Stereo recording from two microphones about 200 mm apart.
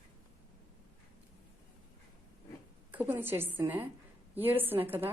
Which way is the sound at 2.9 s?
10° right (ahead or behind).